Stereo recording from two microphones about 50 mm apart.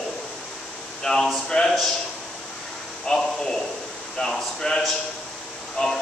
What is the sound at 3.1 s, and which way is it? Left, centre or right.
A man's voice, centre.